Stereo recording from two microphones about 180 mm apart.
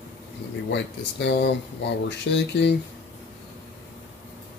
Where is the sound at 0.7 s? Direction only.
70° left (ahead or behind).